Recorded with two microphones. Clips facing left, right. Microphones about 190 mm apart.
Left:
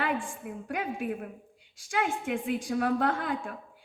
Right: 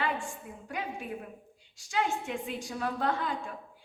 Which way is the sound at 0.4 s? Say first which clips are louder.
Left 4 dB; 60° left (ahead or behind).